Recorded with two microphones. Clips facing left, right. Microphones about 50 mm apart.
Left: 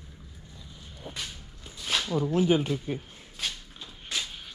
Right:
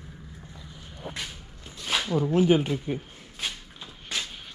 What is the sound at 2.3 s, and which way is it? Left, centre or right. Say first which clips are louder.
Speech: right 3 dB; right.